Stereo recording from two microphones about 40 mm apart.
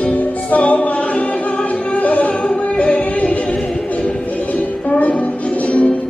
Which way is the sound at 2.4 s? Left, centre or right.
Left.